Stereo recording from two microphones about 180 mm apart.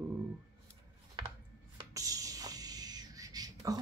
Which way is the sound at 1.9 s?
20° right (ahead or behind).